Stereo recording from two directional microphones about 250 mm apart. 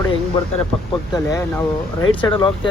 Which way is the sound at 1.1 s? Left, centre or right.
Centre.